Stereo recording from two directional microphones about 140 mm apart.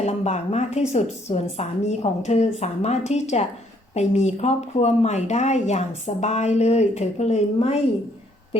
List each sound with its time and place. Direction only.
0.0 s speech: 50° left (ahead or behind)